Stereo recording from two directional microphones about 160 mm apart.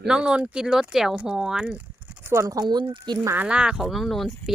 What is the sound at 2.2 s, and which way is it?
Speech, 20° right (ahead or behind).